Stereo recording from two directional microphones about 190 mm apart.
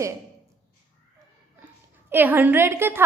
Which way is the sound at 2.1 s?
10° right (ahead or behind).